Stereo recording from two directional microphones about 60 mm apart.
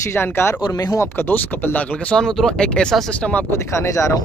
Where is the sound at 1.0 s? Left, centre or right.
Left.